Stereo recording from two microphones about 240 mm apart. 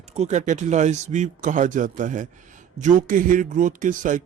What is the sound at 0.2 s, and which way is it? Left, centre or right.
A man's voice, right.